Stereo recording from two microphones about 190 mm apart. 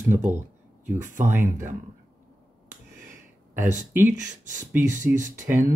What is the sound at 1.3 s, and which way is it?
Speech, 10° right (ahead or behind).